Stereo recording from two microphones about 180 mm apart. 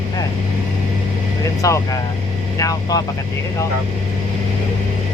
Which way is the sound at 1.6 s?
20° left (ahead or behind).